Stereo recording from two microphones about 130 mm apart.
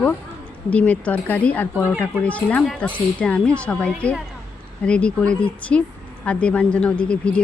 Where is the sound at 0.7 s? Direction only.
10° left (ahead or behind).